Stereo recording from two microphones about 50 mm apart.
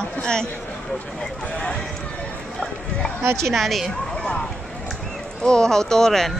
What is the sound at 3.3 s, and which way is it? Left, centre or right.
Speech, centre.